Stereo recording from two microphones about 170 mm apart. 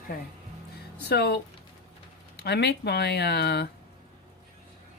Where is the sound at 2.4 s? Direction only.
75° left (ahead or behind).